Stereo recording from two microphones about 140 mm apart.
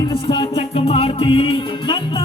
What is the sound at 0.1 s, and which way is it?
Music, 35° left (ahead or behind).